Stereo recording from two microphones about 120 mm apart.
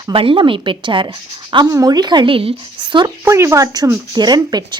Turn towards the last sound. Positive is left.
turn(degrees=-35)  # may be behind; listen again after turning